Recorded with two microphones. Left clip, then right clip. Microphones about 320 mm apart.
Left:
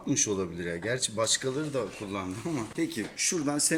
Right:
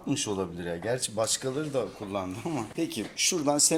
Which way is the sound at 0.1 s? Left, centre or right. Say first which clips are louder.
Left 1 dB; centre.